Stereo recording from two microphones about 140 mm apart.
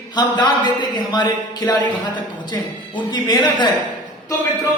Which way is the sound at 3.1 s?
30° left (ahead or behind).